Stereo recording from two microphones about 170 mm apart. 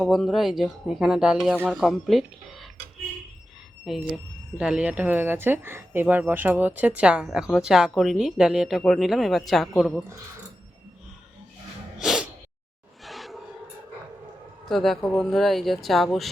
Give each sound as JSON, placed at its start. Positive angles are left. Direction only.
{"t": 0.0, "sound": "speech", "side_deg": 0}
{"t": 3.8, "sound": "speech", "side_deg": 0}
{"t": 11.9, "sound": "sneeze", "side_deg": 0}
{"t": 13.1, "sound": "a sound", "side_deg": 0}
{"t": 14.7, "sound": "speech", "side_deg": 0}